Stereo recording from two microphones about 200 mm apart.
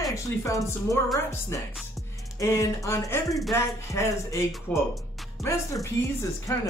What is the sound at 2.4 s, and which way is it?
Speech, 15° left (ahead or behind).